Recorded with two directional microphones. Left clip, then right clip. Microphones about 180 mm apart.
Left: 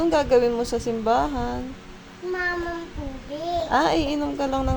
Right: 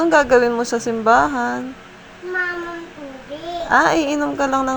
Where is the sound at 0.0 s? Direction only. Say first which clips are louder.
Right 6 dB; 5° right (ahead or behind).